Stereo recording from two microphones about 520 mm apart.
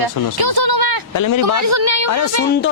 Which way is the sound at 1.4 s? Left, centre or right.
Right.